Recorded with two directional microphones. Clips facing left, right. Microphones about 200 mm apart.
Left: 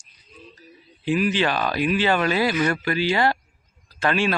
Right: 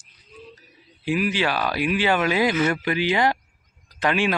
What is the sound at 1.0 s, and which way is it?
Speech, 10° right (ahead or behind).